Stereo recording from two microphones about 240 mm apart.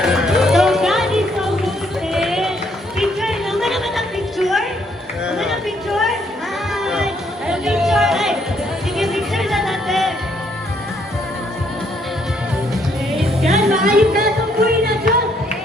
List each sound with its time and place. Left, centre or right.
0.0 s music: centre
2.1 s run: centre
3.0 s music: centre
5.2 s chatter: centre
6.7 s music: centre
13.1 s music: centre
14.2 s music: right